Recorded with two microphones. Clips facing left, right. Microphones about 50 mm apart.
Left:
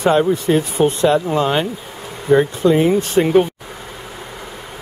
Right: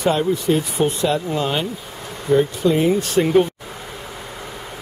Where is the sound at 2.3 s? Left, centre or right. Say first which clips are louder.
Left 3 dB; left.